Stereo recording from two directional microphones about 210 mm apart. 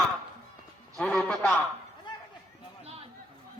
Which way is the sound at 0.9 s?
5° left (ahead or behind).